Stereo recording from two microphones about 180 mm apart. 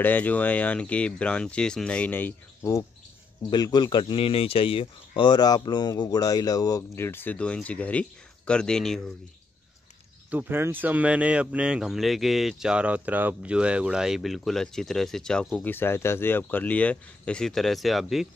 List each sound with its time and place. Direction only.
0.0 s speech: 10° left (ahead or behind)
10.3 s speech: 10° right (ahead or behind)